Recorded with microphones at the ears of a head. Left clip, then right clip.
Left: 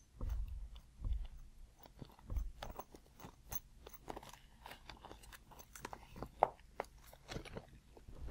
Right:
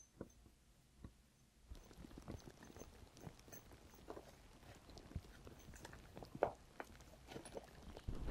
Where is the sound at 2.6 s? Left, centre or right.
Left.